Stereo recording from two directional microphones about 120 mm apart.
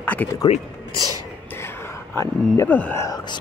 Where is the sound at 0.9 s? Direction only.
30° right (ahead or behind).